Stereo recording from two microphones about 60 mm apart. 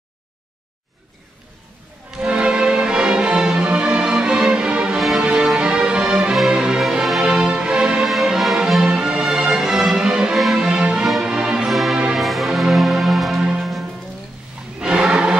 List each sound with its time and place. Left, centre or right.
2.0 s music: centre
4.9 s music: centre
5.2 s music: centre
8.1 s music: centre
8.8 s music: centre
11.7 s music: centre
14.8 s music: centre